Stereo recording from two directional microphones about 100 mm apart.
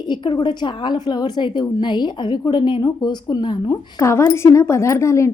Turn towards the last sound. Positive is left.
turn(degrees=30)  # may be behind; listen again after turning